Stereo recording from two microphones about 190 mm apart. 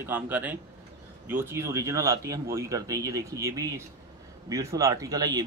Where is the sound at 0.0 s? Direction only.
10° right (ahead or behind).